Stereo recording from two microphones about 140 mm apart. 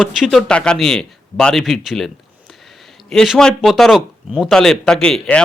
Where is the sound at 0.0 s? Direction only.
Centre (ahead or behind).